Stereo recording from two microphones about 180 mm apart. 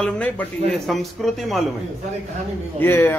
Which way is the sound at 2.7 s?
10° left (ahead or behind).